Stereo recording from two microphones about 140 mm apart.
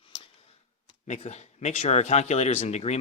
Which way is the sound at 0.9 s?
50° left (ahead or behind).